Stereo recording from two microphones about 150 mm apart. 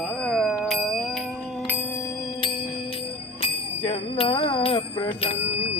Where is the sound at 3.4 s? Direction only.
40° left (ahead or behind).